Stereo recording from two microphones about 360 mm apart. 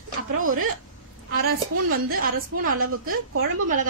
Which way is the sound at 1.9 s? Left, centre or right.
Right.